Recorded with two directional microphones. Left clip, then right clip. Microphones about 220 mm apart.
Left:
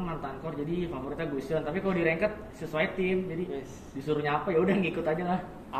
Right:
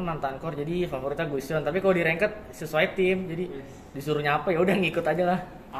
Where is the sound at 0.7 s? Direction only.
45° right (ahead or behind).